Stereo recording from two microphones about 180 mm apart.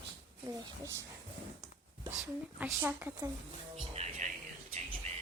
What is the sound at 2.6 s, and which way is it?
Speech, 10° right (ahead or behind).